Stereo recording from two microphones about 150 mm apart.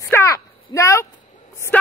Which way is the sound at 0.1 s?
20° left (ahead or behind).